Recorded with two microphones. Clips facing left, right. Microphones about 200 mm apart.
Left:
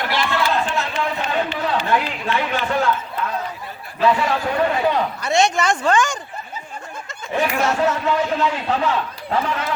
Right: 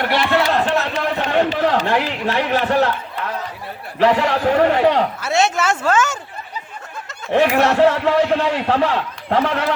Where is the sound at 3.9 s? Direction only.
70° right (ahead or behind).